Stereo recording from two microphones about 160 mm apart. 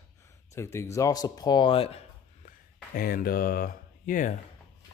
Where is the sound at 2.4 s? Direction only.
65° left (ahead or behind).